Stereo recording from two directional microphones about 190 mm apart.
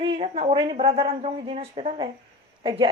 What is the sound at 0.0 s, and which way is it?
A woman's voice, 30° right (ahead or behind).